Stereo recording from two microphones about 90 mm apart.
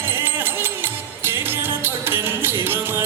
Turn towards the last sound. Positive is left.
turn(degrees=-25)  # may be behind; listen again after turning